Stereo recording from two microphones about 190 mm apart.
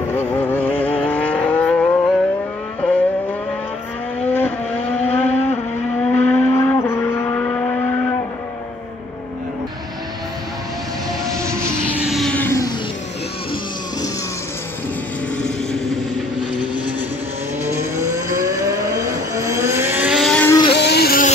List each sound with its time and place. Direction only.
0.1 s vehicle: 10° left (ahead or behind)
0.7 s vehicle: 30° left (ahead or behind)
1.1 s vehicle: 10° left (ahead or behind)
4.3 s vehicle: 10° left (ahead or behind)
12.0 s music: centre (ahead or behind)
18.1 s vehicle: 15° right (ahead or behind); by 20.4 s centre (ahead or behind)
20.4 s vehicle: 20° left (ahead or behind)
20.7 s music: 60° left (ahead or behind)